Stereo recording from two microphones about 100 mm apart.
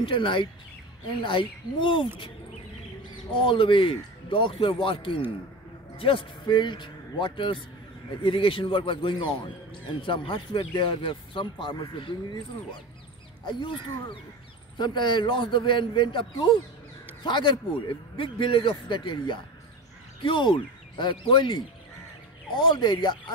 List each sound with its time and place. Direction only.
0.0 s speech: 55° left (ahead or behind)
3.3 s a man's voice: 60° left (ahead or behind)
6.4 s a man's voice: 50° left (ahead or behind)
13.6 s speech: 55° left (ahead or behind)